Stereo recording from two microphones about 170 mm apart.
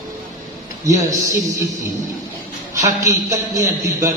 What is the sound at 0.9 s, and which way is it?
Speech, 15° right (ahead or behind).